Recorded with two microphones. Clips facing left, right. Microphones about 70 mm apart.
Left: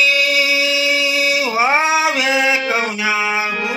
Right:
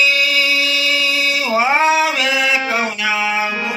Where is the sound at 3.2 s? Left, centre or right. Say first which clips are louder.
Even; centre.